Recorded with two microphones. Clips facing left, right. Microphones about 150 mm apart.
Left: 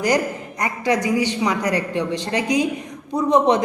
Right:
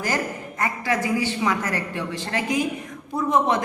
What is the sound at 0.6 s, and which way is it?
A man's voice, 20° left (ahead or behind).